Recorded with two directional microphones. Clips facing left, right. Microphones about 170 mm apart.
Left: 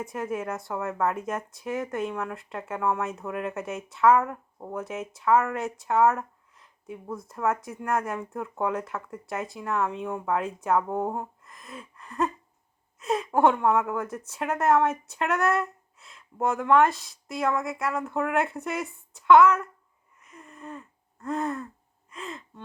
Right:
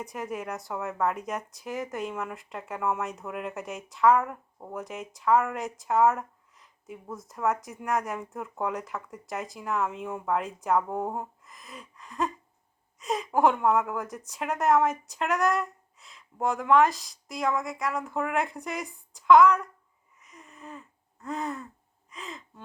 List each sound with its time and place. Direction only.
0.0 s speech: centre (ahead or behind)
20.1 s a sound: centre (ahead or behind)
22.1 s gasp: centre (ahead or behind)